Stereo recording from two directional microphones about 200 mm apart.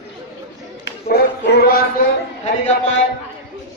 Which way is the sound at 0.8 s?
55° left (ahead or behind).